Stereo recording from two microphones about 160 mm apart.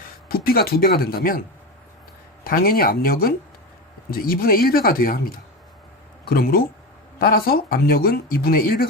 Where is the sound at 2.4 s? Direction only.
65° left (ahead or behind).